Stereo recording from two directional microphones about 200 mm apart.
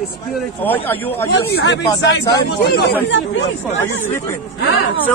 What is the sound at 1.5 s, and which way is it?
Speech, 55° left (ahead or behind).